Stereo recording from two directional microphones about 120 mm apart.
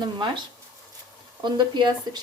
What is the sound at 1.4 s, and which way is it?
Speech, 40° right (ahead or behind).